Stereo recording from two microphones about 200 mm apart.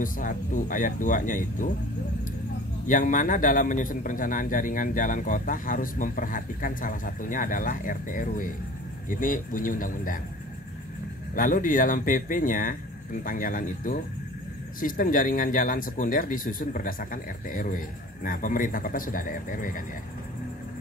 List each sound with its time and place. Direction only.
0.0 s speech: 40° left (ahead or behind)
2.9 s speech: 40° left (ahead or behind)
11.3 s speech: 45° left (ahead or behind)